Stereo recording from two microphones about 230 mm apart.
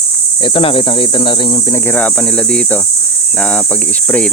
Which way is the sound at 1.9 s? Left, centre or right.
Centre.